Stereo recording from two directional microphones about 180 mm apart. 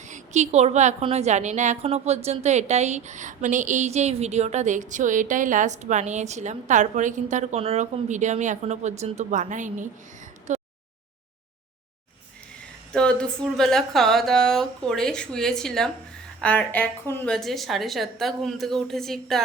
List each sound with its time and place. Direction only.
0.1 s a woman's voice: 40° right (ahead or behind)
10.5 s a sound: 40° right (ahead or behind)
12.9 s speech: 5° left (ahead or behind)